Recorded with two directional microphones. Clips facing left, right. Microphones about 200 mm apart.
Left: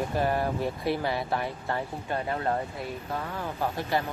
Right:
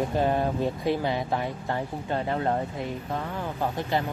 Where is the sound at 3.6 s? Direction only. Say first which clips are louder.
Right 1 dB; 20° right (ahead or behind).